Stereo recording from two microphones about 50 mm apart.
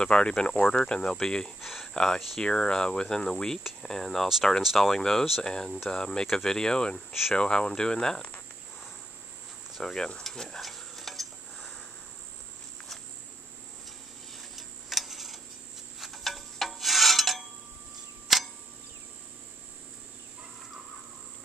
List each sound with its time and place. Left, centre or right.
0.0 s cricket: centre
1.6 s a sound: centre
2.0 s cricket: centre
4.6 s speech: centre
5.4 s cricket: centre
7.1 s speech: centre
7.3 s cricket: centre
9.8 s speech: centre
10.2 s stir: centre
14.3 s tick-tock: centre
16.0 s a sound: centre
18.3 s clock: centre